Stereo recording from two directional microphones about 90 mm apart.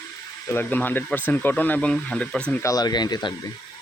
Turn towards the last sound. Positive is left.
turn(degrees=50)  # may be behind; listen again after turning